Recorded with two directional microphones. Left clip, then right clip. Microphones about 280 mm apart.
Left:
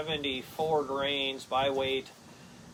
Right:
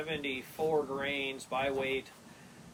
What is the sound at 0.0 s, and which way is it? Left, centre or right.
Speech, centre.